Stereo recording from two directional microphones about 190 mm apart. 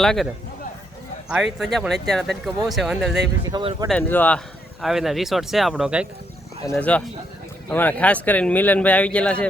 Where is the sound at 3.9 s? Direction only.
10° left (ahead or behind).